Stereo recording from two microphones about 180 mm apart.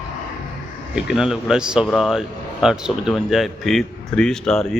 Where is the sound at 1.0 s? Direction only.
5° right (ahead or behind).